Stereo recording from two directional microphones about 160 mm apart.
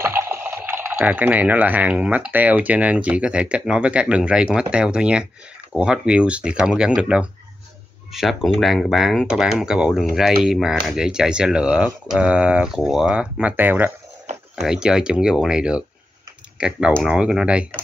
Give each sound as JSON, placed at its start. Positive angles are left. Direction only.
{"t": 0.0, "sound": "speech", "side_deg": -15}